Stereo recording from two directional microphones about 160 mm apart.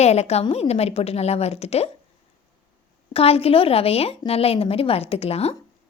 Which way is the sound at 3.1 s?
40° left (ahead or behind).